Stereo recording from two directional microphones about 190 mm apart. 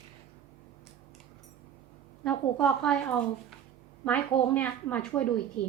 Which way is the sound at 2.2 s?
5° left (ahead or behind).